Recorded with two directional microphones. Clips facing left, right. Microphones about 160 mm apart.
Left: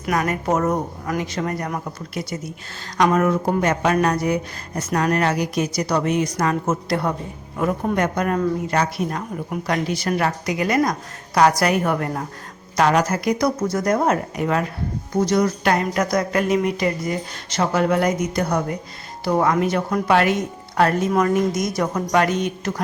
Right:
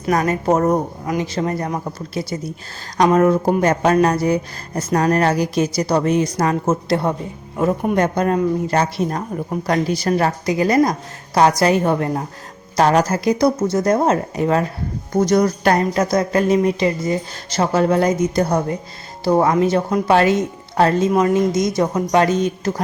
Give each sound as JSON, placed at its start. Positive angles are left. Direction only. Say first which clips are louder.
{"t": 0.0, "sound": "a woman's voice", "louder": "right 4 dB", "side_deg": -35}
{"t": 15.2, "sound": "speech", "louder": "right 3 dB", "side_deg": -40}
{"t": 16.0, "sound": "a woman's voice", "louder": "right 3 dB", "side_deg": -25}